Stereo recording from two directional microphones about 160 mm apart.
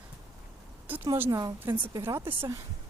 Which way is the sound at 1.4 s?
25° right (ahead or behind).